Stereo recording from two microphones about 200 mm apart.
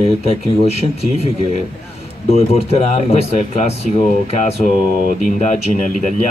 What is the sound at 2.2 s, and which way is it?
Speech, 30° left (ahead or behind).